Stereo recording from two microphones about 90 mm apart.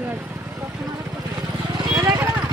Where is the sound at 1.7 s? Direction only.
50° right (ahead or behind).